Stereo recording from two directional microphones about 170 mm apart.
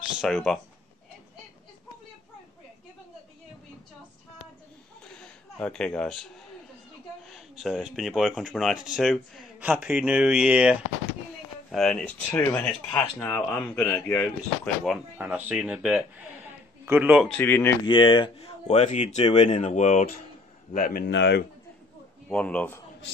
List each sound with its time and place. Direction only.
0.2 s speech: centre (ahead or behind)
5.0 s a sound: 5° left (ahead or behind)
7.2 s speech: centre (ahead or behind)
14.9 s a man's voice: 5° right (ahead or behind)
17.4 s speech: 10° left (ahead or behind)
17.8 s speech: 30° left (ahead or behind); by 21.0 s 50° left (ahead or behind)
21.1 s a man's voice: 85° left
22.3 s speech: 5° left (ahead or behind)